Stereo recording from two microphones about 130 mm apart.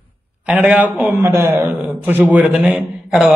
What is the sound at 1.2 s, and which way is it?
A man's voice, 20° right (ahead or behind).